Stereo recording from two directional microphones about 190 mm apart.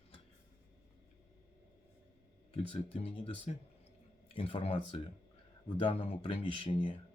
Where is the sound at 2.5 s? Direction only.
30° left (ahead or behind).